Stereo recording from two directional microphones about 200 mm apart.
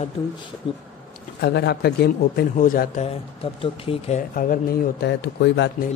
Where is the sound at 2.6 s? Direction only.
40° left (ahead or behind).